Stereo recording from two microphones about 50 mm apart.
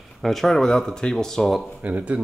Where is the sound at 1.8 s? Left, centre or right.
Right.